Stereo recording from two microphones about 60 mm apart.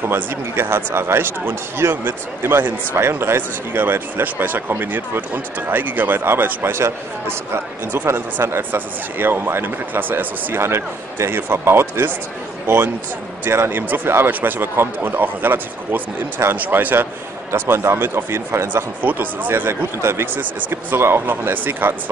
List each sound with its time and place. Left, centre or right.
0.0 s speech: right
18.7 s speech: right